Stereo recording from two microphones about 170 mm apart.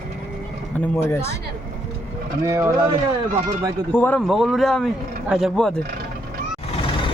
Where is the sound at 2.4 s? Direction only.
15° right (ahead or behind).